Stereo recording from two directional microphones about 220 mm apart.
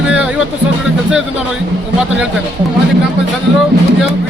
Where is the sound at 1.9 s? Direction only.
5° right (ahead or behind).